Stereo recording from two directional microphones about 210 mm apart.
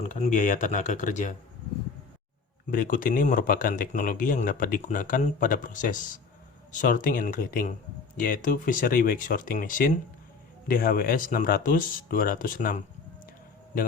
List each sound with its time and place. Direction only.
0.1 s speech: 35° left (ahead or behind)
2.6 s speech: 40° left (ahead or behind)